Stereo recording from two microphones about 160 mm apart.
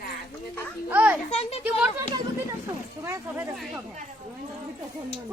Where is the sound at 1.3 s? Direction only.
40° left (ahead or behind).